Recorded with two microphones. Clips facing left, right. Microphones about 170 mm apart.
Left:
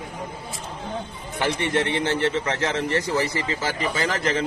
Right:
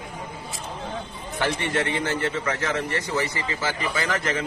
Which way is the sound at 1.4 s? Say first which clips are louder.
Left 2 dB; 15° left (ahead or behind).